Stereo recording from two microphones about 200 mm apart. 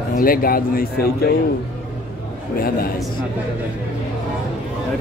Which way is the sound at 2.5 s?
50° left (ahead or behind).